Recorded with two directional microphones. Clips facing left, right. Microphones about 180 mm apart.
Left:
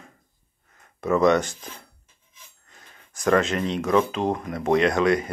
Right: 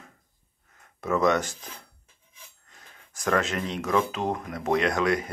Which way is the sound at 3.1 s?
Centre (ahead or behind).